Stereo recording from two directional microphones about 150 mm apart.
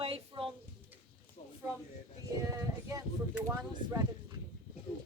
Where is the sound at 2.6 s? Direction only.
20° right (ahead or behind).